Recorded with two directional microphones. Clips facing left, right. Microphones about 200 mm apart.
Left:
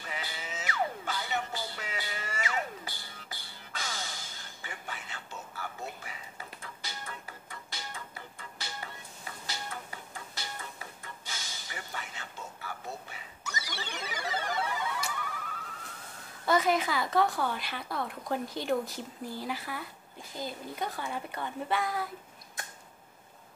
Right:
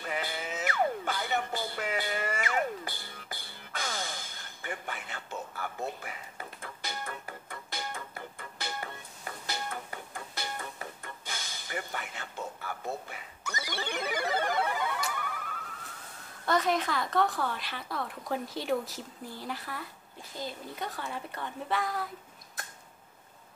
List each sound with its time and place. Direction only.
0.0 s music: 55° right (ahead or behind)
10.4 s music: 55° right (ahead or behind)
11.2 s a sound: 55° right (ahead or behind)
13.4 s music: 55° right (ahead or behind)
16.4 s speech: 5° left (ahead or behind)